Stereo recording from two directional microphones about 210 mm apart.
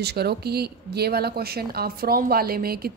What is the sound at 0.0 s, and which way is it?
Speech, 50° right (ahead or behind).